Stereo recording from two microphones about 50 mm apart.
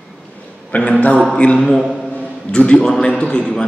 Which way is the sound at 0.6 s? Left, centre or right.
Left.